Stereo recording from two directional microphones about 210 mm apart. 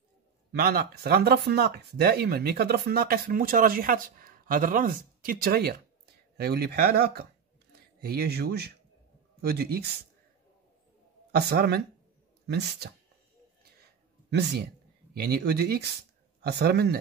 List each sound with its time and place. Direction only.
0.6 s speech: 50° right (ahead or behind)
11.3 s speech: 50° right (ahead or behind)
14.3 s speech: 50° right (ahead or behind)